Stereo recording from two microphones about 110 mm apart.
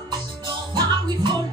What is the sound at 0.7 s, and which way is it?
Music, 45° right (ahead or behind).